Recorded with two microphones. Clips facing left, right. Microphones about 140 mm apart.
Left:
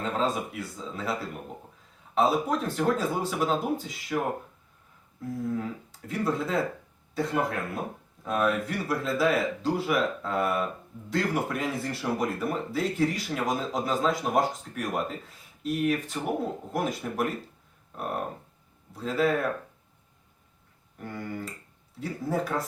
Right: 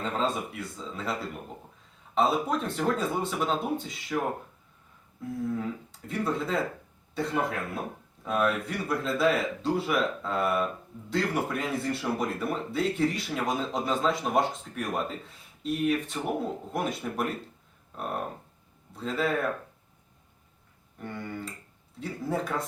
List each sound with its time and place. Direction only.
0.0 s speech: centre (ahead or behind)
5.5 s speech: centre (ahead or behind)
17.9 s a sound: 5° left (ahead or behind)
18.9 s speech: centre (ahead or behind)
21.0 s speech: centre (ahead or behind)